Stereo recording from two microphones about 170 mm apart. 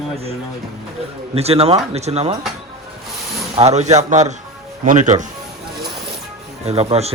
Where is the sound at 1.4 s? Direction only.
40° right (ahead or behind).